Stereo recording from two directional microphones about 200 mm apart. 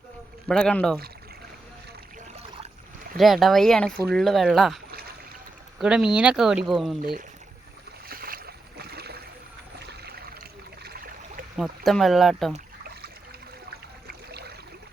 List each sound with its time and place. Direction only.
0.4 s speech: 5° left (ahead or behind)
3.2 s speech: centre (ahead or behind)
4.9 s rowboat: 50° right (ahead or behind)
5.8 s speech: 5° right (ahead or behind)
8.0 s boat: 50° right (ahead or behind)
9.8 s trickle: 50° right (ahead or behind)
10.8 s a sound: 50° right (ahead or behind)
11.5 s speech: centre (ahead or behind)